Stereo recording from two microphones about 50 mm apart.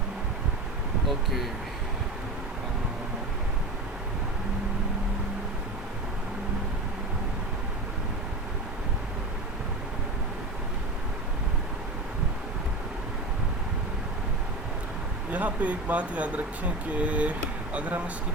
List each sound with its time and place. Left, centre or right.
1.0 s speech: centre
15.3 s speech: right